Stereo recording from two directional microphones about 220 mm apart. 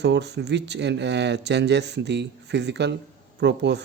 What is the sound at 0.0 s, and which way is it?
Speech, 50° right (ahead or behind).